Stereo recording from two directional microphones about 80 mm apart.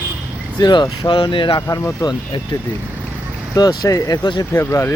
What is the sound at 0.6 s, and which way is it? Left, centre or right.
Speech, left.